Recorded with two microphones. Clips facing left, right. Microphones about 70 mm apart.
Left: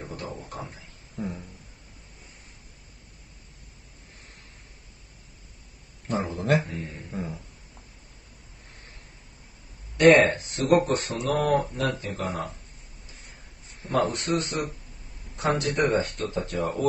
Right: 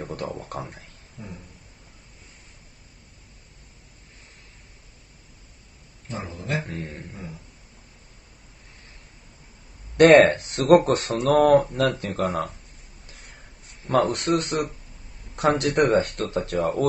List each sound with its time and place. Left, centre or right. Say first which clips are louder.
0.0 s a sound: right 5 dB; right
0.5 s speech: right 4 dB; right
1.2 s a sound: left 8 dB; left
6.0 s speech: left 6 dB; left
6.6 s speech: right 2 dB; right
9.9 s speech: right 4 dB; right
13.8 s speech: right 4 dB; right